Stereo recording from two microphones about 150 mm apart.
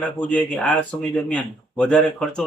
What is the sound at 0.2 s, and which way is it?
A man's voice, 10° left (ahead or behind).